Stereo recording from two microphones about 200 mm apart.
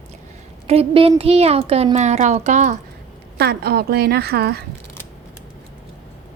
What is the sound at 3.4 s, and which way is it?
A woman's voice, 55° right (ahead or behind).